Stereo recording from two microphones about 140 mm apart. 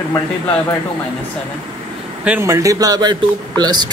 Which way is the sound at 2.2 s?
15° right (ahead or behind).